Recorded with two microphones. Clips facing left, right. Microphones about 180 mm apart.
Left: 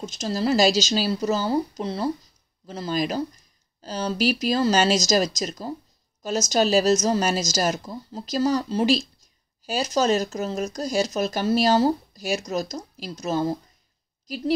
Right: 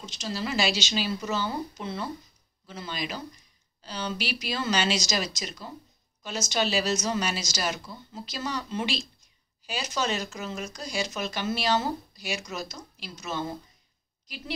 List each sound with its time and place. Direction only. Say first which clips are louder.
0.0 s a woman's voice: left 8 dB; 45° left (ahead or behind)